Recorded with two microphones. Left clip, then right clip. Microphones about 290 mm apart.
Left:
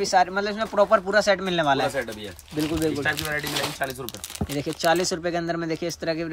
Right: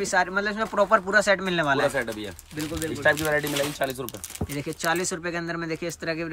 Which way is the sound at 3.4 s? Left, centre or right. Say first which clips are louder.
Right 1 dB; left.